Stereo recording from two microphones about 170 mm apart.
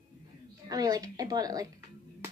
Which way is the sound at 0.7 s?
20° right (ahead or behind).